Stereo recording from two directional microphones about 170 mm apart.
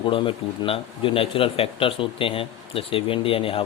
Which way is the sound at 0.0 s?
30° left (ahead or behind).